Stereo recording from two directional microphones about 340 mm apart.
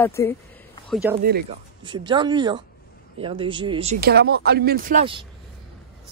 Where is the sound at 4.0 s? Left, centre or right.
Right.